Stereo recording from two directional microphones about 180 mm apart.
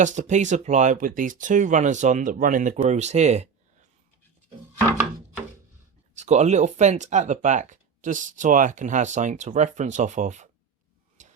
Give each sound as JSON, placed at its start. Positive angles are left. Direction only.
{"t": 0.0, "sound": "speech", "side_deg": -40}
{"t": 6.1, "sound": "speech", "side_deg": -40}
{"t": 11.2, "sound": "tick-tock", "side_deg": -45}